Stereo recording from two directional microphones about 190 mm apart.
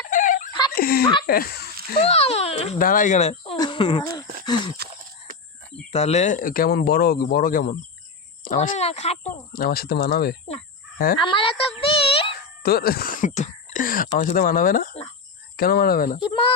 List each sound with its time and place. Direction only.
0.1 s a sound: 45° left (ahead or behind)
0.8 s speech: 50° left (ahead or behind)
2.0 s speech: 30° left (ahead or behind)
2.7 s speech: 45° left (ahead or behind); by 4.3 s 20° left (ahead or behind)
4.4 s a sound: 25° left (ahead or behind)
5.9 s speech: 35° left (ahead or behind)
9.5 s speech: 50° left (ahead or behind)
10.9 s fowl: 50° left (ahead or behind)
11.2 s a woman's voice: 25° left (ahead or behind)
12.6 s speech: 55° left (ahead or behind)
16.3 s a child's voice: 30° left (ahead or behind)